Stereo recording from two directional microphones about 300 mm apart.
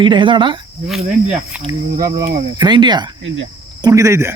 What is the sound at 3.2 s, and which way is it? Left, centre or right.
Speech, right.